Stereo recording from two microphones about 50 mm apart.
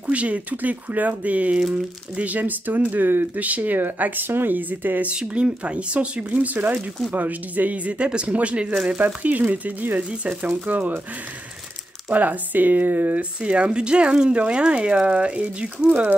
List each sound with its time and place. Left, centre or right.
0.0 s speech: right
3.3 s speech: right
5.1 s speech: right
12.1 s speech: right
13.4 s speech: right